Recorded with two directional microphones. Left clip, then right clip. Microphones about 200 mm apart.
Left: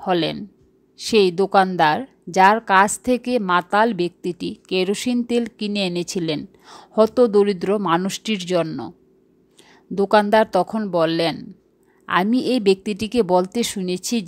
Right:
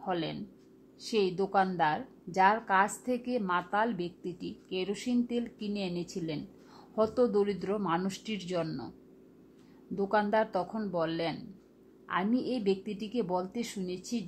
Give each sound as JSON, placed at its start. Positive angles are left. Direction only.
{"t": 0.0, "sound": "a woman's voice", "side_deg": 40}
{"t": 9.9, "sound": "a woman's voice", "side_deg": 40}